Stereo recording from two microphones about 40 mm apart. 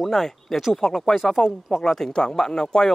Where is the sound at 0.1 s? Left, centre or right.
Centre.